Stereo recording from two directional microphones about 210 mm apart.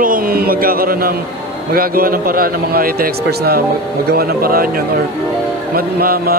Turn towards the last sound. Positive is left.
turn(degrees=-45)  # may be behind; listen again after turning